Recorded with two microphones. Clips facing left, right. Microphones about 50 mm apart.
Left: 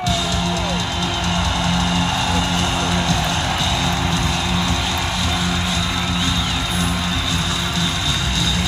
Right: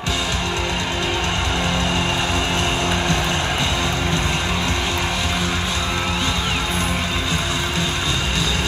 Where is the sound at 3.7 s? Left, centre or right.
Right.